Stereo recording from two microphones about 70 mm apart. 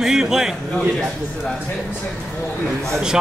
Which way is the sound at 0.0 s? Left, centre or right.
Centre.